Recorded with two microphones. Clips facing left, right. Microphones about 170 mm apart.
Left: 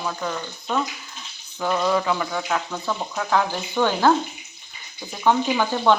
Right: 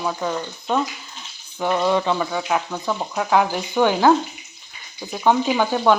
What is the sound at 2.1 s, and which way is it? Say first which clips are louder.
Speech: right 3 dB; 10° right (ahead or behind).